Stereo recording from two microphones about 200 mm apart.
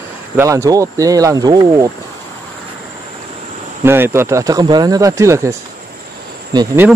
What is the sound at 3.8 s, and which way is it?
Speech, 10° right (ahead or behind).